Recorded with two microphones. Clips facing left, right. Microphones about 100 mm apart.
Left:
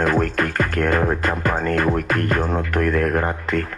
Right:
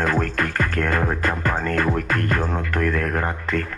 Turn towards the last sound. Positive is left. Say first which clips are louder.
# left 3 dB
turn(degrees=45)  # may be behind; listen again after turning